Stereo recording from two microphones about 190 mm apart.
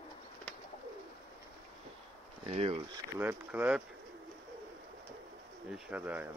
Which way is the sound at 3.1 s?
10° right (ahead or behind).